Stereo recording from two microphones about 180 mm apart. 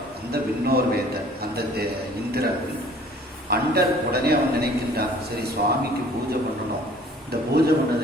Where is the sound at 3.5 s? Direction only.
60° right (ahead or behind).